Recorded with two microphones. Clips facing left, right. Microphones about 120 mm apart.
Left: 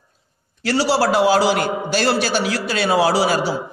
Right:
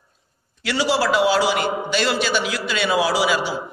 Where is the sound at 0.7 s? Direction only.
40° left (ahead or behind).